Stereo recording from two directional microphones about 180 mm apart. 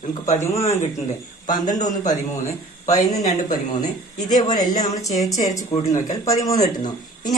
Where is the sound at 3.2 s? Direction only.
45° left (ahead or behind).